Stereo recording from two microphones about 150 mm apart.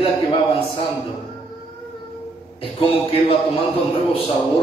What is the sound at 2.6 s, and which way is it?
A man's voice, 35° left (ahead or behind).